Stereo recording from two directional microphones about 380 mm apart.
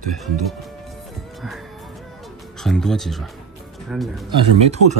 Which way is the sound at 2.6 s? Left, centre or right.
Centre.